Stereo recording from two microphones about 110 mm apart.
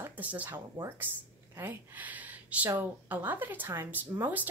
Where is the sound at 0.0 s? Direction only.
15° right (ahead or behind).